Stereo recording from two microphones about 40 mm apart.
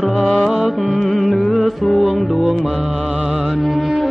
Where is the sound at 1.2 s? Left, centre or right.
Centre.